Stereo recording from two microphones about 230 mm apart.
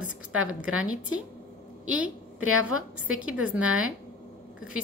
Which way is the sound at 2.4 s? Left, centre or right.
Right.